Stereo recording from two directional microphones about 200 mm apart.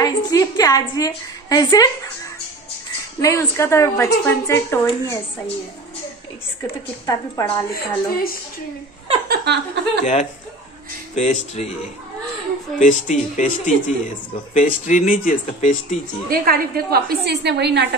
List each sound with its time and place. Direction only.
0.0 s a woman's voice: 20° left (ahead or behind)
3.2 s a woman's voice: 15° left (ahead or behind)
7.1 s a woman's voice: 15° left (ahead or behind)
7.7 s a woman's voice: 45° left (ahead or behind)
9.3 s a woman's voice: 55° right (ahead or behind)
11.1 s speech: 35° left (ahead or behind)
12.7 s speech: 40° left (ahead or behind)
16.3 s a woman's voice: 50° right (ahead or behind)